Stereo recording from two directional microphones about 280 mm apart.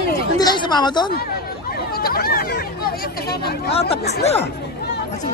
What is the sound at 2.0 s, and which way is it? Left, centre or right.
Speech, left.